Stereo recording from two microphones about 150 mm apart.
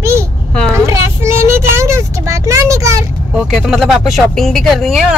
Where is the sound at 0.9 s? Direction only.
20° right (ahead or behind).